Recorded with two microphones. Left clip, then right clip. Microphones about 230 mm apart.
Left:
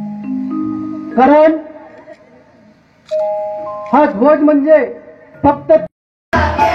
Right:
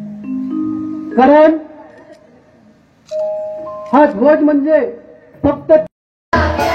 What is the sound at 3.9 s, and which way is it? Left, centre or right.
Speech, left.